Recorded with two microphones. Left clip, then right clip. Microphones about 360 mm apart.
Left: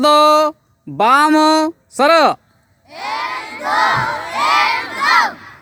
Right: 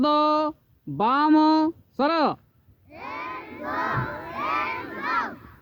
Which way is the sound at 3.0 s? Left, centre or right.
Left.